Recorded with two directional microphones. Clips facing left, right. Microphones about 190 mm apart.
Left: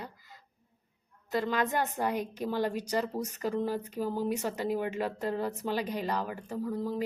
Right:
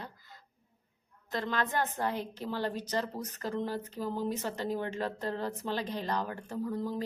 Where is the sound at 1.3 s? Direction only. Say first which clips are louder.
Left 3 dB; 10° left (ahead or behind).